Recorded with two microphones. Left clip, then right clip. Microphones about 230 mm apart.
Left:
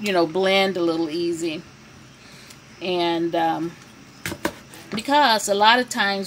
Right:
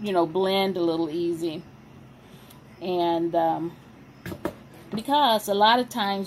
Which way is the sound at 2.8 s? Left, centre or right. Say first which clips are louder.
Left 2 dB; left.